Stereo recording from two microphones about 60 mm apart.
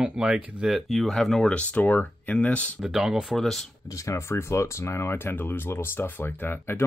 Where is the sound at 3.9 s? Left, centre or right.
Left.